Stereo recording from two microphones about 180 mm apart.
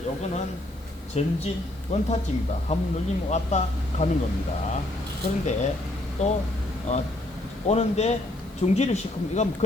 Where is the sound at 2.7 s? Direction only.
35° left (ahead or behind).